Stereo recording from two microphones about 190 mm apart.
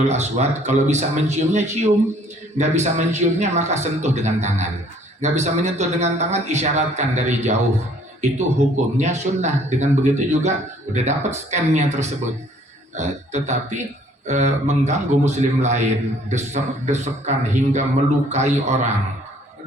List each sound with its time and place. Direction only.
0.1 s a man's voice: 35° right (ahead or behind)